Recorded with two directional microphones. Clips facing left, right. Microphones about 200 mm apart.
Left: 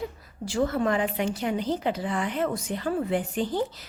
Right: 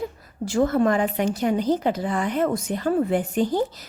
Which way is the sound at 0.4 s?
45° right (ahead or behind).